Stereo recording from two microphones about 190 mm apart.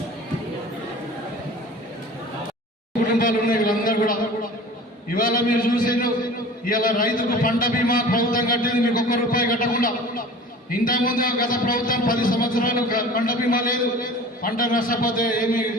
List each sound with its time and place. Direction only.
3.0 s a man's voice: 45° left (ahead or behind)